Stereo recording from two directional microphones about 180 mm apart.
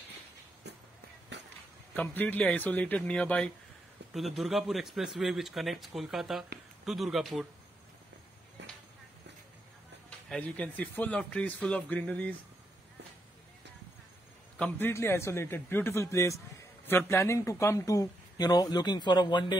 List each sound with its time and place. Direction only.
1.3 s a sound: 75° right (ahead or behind)
2.0 s a man's voice: 10° left (ahead or behind)
4.0 s a sound: 70° right (ahead or behind)
4.4 s speech: centre (ahead or behind)
10.0 s a man's voice: 5° left (ahead or behind)
14.6 s a man's voice: 10° left (ahead or behind)